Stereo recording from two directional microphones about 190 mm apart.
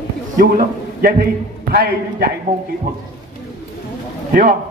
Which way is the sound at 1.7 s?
55° right (ahead or behind).